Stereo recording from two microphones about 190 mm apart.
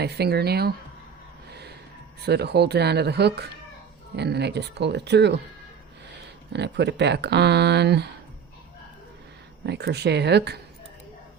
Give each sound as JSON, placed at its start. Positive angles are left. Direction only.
{"t": 0.0, "sound": "speech", "side_deg": -60}
{"t": 1.5, "sound": "gasp", "side_deg": -60}
{"t": 2.2, "sound": "speech", "side_deg": -60}
{"t": 6.5, "sound": "speech", "side_deg": -65}
{"t": 9.6, "sound": "speech", "side_deg": -60}